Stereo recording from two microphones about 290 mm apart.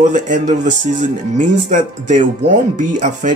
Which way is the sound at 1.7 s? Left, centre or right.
Right.